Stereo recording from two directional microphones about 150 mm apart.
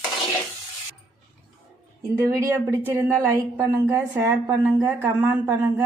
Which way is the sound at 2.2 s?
20° right (ahead or behind).